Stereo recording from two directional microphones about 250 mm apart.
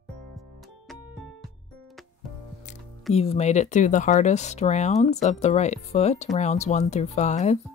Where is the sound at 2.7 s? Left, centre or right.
Left.